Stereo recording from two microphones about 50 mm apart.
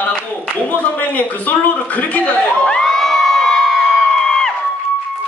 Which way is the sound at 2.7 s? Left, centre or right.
Centre.